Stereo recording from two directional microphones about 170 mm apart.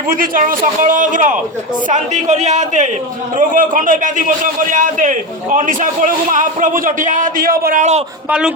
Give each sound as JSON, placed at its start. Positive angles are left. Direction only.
{"t": 0.1, "sound": "a man's voice", "side_deg": -55}
{"t": 8.3, "sound": "a man's voice", "side_deg": -5}